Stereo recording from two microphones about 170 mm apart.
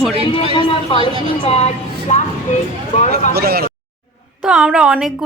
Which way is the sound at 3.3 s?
65° right (ahead or behind).